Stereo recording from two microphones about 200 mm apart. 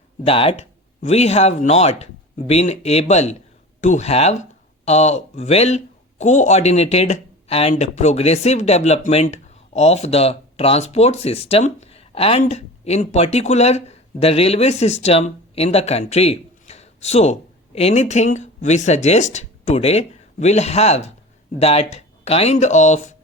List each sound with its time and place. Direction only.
0.3 s speech: 30° left (ahead or behind)